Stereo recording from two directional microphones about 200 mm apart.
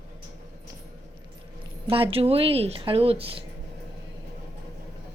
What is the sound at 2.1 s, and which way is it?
Speech, 30° right (ahead or behind).